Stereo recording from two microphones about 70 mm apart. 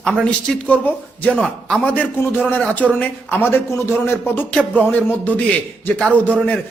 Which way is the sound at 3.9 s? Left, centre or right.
Left.